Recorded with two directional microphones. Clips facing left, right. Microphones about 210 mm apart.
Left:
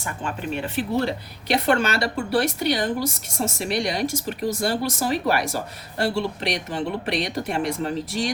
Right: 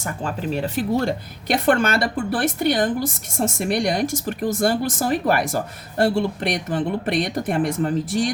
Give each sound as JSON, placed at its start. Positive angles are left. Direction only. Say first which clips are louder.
{"t": 0.0, "sound": "speech", "louder": "right 3 dB", "side_deg": -40}